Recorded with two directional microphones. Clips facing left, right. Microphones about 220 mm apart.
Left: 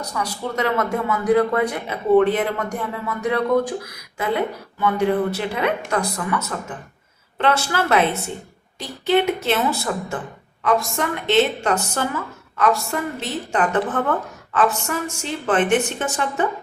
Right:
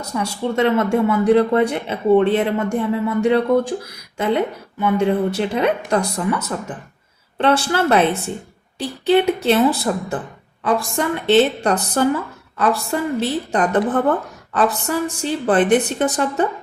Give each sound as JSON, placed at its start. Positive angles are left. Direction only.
{"t": 0.0, "sound": "a woman's voice", "side_deg": -25}